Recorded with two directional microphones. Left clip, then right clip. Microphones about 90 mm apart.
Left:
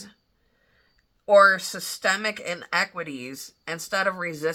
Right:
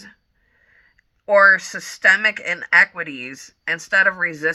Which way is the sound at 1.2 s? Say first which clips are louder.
Right 3 dB; 20° left (ahead or behind).